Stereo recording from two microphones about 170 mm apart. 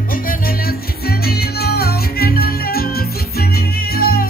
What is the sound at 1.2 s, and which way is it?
Music, 65° left (ahead or behind).